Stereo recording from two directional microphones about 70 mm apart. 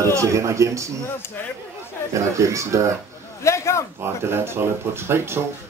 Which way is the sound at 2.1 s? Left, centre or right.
Right.